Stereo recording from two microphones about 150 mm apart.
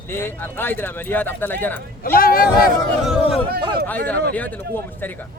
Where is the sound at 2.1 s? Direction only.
75° left (ahead or behind).